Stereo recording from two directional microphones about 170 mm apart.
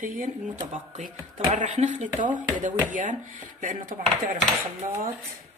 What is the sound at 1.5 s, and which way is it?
Speech, 40° right (ahead or behind).